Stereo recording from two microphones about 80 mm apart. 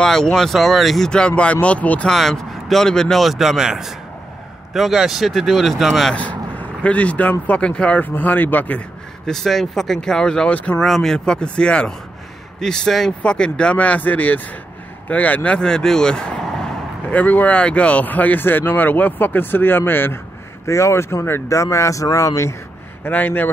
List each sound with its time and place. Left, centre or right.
0.0 s speech: centre
2.0 s speech: centre
6.1 s speech: centre
9.2 s speech: centre
10.8 s speech: centre
17.1 s speech: centre; by 22.6 s left
23.0 s speech: left